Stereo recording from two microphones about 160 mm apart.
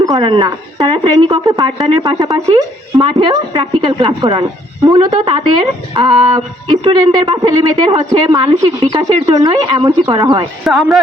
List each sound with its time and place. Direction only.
0.0 s speech: 25° right (ahead or behind)
5.1 s speech: 35° right (ahead or behind)
8.8 s speech: 40° right (ahead or behind)
9.2 s speech: 20° right (ahead or behind)
10.6 s speech: centre (ahead or behind)